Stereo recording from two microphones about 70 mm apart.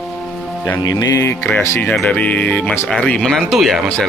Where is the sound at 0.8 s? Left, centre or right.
Left.